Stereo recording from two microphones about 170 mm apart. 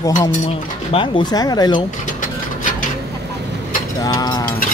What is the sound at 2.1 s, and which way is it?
Rub, 50° left (ahead or behind).